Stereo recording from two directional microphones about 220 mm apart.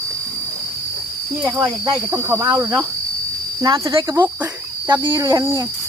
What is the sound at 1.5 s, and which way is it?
Speech, 20° right (ahead or behind).